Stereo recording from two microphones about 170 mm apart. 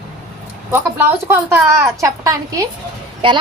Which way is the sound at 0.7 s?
10° right (ahead or behind).